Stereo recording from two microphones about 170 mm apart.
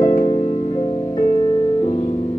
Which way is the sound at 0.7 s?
25° left (ahead or behind).